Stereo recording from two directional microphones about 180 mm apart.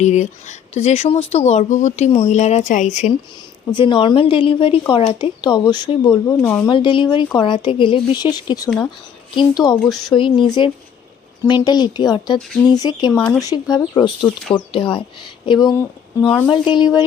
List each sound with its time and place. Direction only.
0.0 s speech: 40° left (ahead or behind)
3.8 s speech: 25° left (ahead or behind)
9.8 s speech: centre (ahead or behind)
10.2 s speech: 25° left (ahead or behind)
11.4 s speech: 25° left (ahead or behind)
13.1 s speech: 5° left (ahead or behind)
13.4 s speech: 20° left (ahead or behind)